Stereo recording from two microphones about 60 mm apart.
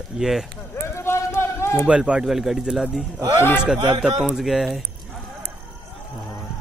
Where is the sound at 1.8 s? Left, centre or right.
Centre.